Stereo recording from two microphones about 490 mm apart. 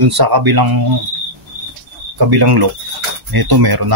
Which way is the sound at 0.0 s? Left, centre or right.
Right.